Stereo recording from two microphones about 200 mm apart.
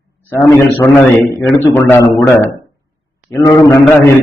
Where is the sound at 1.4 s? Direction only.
5° left (ahead or behind).